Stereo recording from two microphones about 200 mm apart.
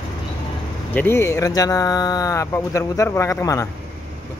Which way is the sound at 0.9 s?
10° left (ahead or behind).